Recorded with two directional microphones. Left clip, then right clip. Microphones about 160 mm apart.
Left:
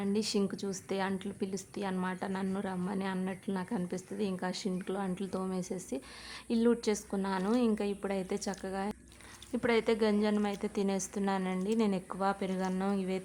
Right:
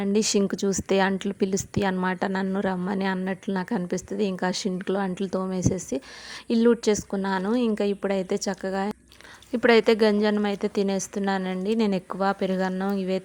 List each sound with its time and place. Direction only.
0.0 s a woman's voice: 40° right (ahead or behind)